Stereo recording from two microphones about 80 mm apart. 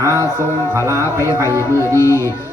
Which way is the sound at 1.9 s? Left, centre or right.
Left.